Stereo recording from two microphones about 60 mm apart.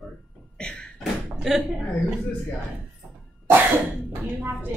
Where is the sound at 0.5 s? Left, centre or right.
Centre.